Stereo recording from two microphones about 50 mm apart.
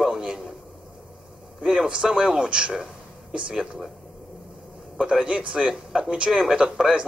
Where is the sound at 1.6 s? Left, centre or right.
Centre.